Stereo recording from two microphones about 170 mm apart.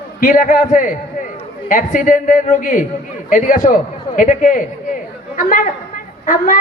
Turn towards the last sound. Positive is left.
turn(degrees=50)  # may be behind; listen again after turning